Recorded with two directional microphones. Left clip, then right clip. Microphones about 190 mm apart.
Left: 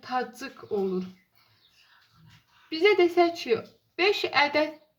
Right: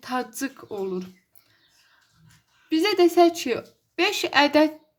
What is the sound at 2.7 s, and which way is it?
A woman's voice, 50° right (ahead or behind).